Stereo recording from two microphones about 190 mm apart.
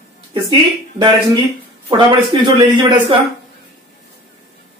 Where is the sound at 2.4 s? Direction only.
25° right (ahead or behind).